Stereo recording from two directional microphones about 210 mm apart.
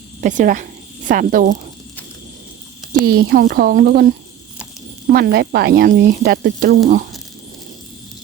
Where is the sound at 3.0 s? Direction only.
45° right (ahead or behind).